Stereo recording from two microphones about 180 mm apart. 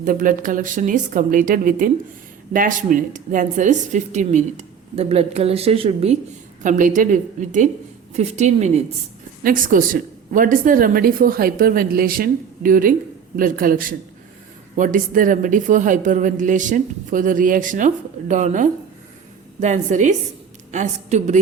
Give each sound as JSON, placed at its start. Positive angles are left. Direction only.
{"t": 0.0, "sound": "a woman's voice", "side_deg": -50}
{"t": 6.6, "sound": "a woman's voice", "side_deg": -45}
{"t": 9.4, "sound": "a woman's voice", "side_deg": -50}